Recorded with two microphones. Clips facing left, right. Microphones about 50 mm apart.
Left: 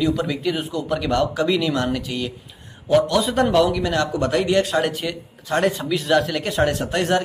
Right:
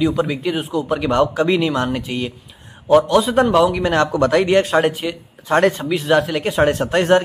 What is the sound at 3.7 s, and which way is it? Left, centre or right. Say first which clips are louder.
Speech: right 4 dB; right.